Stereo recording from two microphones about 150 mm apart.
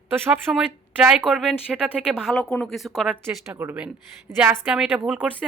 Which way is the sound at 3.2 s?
15° right (ahead or behind).